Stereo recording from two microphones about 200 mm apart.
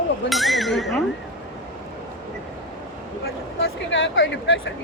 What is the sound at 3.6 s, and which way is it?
Speech, 70° left (ahead or behind).